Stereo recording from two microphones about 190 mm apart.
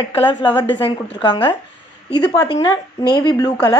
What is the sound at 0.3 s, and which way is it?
A woman's voice, 25° left (ahead or behind).